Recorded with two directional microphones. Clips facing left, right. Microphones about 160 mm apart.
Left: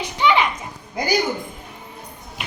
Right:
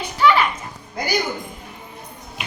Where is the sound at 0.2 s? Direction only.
20° left (ahead or behind).